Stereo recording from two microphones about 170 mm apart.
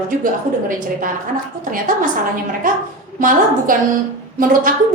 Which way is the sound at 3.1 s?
50° right (ahead or behind).